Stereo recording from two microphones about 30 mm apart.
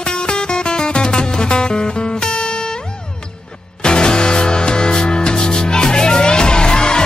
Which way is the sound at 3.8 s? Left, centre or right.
Left.